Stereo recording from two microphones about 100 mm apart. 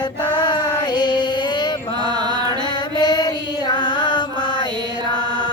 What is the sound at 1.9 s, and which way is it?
Mantra, 45° right (ahead or behind).